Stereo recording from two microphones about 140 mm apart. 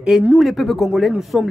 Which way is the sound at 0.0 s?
10° right (ahead or behind).